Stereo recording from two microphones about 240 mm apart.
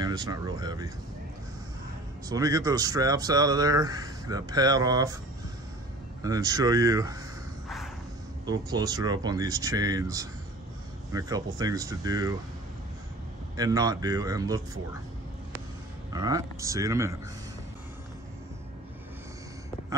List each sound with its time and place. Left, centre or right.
0.0 s speech: centre
2.2 s speech: centre
6.2 s speech: centre
7.6 s vehicle: centre
8.5 s speech: centre
13.6 s speech: centre
16.1 s speech: centre